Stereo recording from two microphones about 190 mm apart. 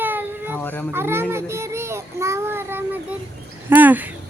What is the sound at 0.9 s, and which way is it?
Child singing, 10° right (ahead or behind).